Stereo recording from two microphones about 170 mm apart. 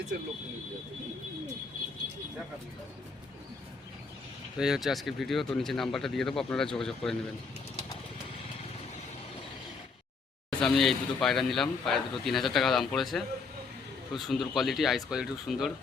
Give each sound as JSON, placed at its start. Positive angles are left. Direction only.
{"t": 4.5, "sound": "speech", "side_deg": -5}
{"t": 10.5, "sound": "speech", "side_deg": 0}